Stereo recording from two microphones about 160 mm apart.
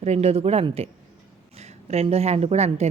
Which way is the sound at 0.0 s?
40° right (ahead or behind).